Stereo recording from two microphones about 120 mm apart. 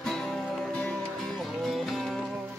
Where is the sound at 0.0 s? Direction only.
5° left (ahead or behind).